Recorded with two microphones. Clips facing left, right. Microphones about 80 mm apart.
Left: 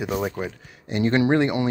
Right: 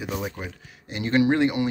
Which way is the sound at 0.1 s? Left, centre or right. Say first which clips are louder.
Left 4 dB; left.